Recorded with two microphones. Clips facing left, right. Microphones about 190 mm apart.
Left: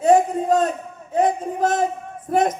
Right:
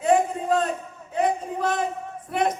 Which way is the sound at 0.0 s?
40° left (ahead or behind).